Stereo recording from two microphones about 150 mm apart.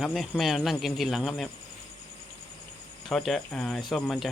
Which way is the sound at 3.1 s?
5° left (ahead or behind).